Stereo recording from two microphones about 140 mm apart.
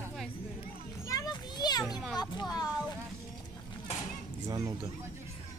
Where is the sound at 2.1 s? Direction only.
30° left (ahead or behind).